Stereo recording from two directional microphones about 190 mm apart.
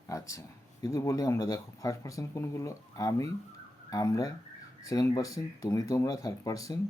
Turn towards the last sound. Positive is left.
turn(degrees=20)  # may be behind; listen again after turning